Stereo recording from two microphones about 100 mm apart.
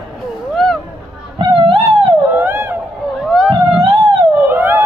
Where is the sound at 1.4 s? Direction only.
60° right (ahead or behind).